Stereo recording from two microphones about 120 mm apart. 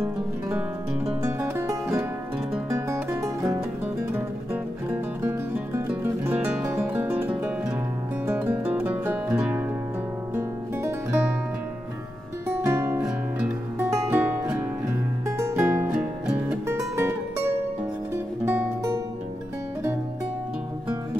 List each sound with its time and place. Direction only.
0.0 s music: 20° right (ahead or behind)
4.1 s music: 15° right (ahead or behind)
12.6 s music: 20° right (ahead or behind)
15.2 s music: 25° right (ahead or behind); by 16.5 s 10° right (ahead or behind)
16.6 s music: 25° right (ahead or behind)
18.1 s music: 15° right (ahead or behind)